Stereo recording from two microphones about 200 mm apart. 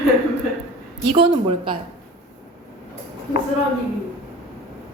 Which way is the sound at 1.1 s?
25° right (ahead or behind).